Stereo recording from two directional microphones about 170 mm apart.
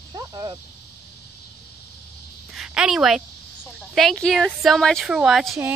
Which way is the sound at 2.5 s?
5° right (ahead or behind).